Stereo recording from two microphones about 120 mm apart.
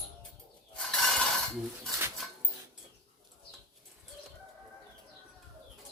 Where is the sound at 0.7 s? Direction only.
5° left (ahead or behind).